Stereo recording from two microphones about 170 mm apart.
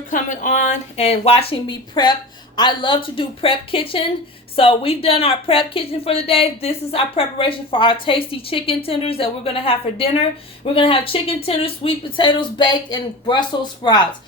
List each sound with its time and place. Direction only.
0.1 s speech: 50° left (ahead or behind); by 14.0 s 25° left (ahead or behind)